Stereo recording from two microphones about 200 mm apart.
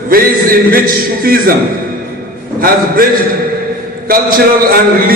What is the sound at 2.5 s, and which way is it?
Speech, 45° right (ahead or behind).